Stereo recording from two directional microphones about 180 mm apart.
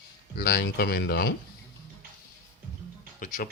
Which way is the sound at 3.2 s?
50° left (ahead or behind).